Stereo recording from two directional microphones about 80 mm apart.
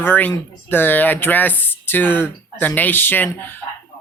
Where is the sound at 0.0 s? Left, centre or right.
Left.